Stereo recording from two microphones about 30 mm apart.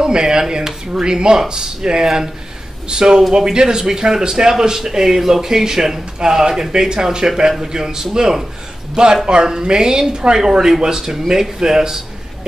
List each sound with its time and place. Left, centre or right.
0.0 s speech: right
6.1 s speech: right